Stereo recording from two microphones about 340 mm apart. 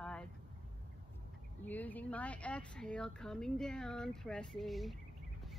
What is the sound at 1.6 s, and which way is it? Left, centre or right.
Speech, centre.